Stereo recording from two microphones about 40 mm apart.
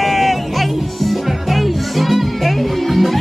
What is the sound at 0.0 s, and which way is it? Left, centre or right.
Music, centre.